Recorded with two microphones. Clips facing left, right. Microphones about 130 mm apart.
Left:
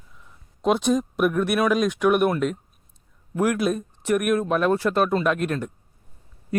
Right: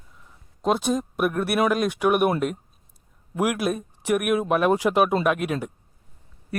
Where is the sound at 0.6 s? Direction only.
Centre (ahead or behind).